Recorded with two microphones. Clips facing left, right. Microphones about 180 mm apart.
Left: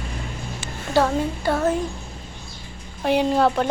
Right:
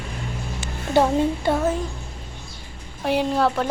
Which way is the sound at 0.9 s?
20° right (ahead or behind).